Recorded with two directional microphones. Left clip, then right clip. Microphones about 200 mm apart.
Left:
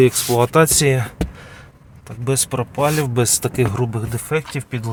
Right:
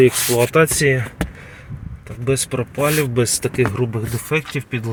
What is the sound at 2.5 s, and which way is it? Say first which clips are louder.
Speech: left 2 dB; 10° left (ahead or behind).